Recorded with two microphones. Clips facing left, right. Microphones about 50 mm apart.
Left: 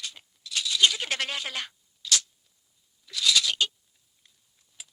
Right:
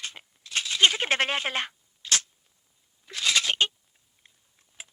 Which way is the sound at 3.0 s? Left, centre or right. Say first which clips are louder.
Even; right.